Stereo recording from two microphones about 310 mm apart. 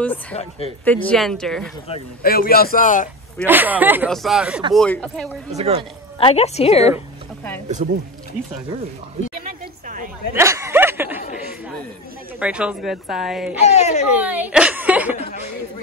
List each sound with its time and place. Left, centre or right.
0.0 s a woman's voice: centre
2.2 s speech: left
3.4 s a woman's voice: centre
5.6 s speech: centre
6.1 s speech: centre
7.6 s speech: right
9.3 s a sound: right
10.3 s snicker: centre
12.4 s a woman's voice: centre
13.7 s speech: left
14.1 s speech: centre